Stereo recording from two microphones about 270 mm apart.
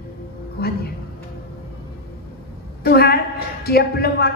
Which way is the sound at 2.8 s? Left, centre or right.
Left.